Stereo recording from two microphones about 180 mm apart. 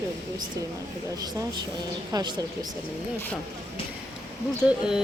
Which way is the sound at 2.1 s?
20° right (ahead or behind).